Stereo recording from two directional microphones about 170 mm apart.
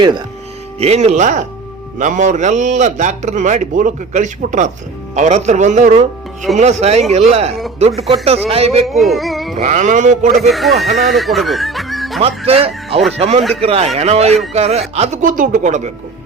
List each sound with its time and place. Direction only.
0.8 s a man's voice: 40° right (ahead or behind)
8.9 s speech: centre (ahead or behind)
9.6 s a man's voice: 45° right (ahead or behind)
10.3 s speech: centre (ahead or behind)
12.5 s a man's voice: 35° right (ahead or behind)